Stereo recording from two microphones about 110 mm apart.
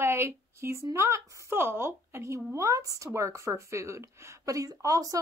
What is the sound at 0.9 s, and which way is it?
A woman's voice, 25° right (ahead or behind).